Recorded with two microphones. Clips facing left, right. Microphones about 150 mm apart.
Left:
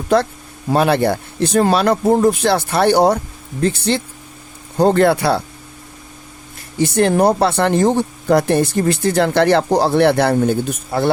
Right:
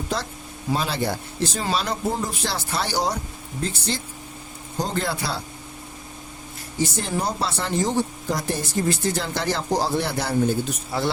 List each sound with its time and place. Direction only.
0.1 s speech: 60° left (ahead or behind)
6.7 s speech: 65° left (ahead or behind)